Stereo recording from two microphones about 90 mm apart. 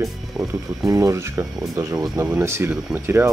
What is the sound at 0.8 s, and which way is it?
Speech, 35° right (ahead or behind).